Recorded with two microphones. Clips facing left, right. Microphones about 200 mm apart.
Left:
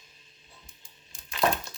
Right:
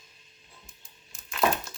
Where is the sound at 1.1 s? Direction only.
Centre (ahead or behind).